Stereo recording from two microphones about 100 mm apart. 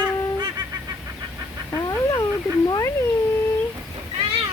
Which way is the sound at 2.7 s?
35° left (ahead or behind).